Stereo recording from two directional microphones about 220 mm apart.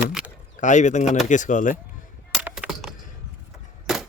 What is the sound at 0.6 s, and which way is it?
A man's voice, 35° left (ahead or behind).